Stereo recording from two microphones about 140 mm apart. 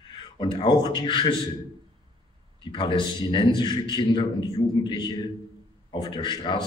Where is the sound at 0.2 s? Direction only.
35° left (ahead or behind).